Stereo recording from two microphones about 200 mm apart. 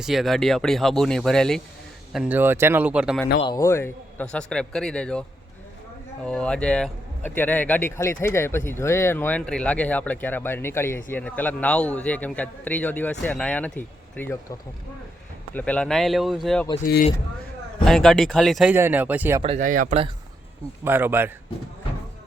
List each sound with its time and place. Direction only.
0.0 s a man's voice: centre (ahead or behind)
3.4 s a man's voice: 20° left (ahead or behind)
6.2 s a man's voice: 5° left (ahead or behind)
15.5 s a man's voice: 5° left (ahead or behind)
17.8 s a man's voice: centre (ahead or behind)
19.4 s speech: 30° right (ahead or behind)
19.6 s speech: 40° right (ahead or behind)
20.8 s speech: 10° right (ahead or behind)